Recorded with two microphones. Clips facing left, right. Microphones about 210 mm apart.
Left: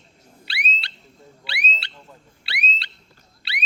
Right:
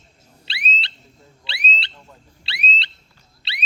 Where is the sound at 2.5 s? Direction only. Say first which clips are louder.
Right 2 dB; 25° right (ahead or behind).